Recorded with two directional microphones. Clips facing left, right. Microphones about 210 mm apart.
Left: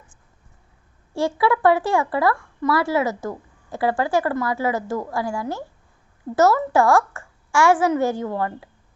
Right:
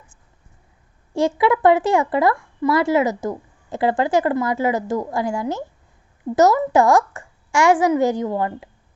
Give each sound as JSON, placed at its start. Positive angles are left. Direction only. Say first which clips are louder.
{"t": 1.1, "sound": "a woman's voice", "louder": "right 3 dB", "side_deg": -20}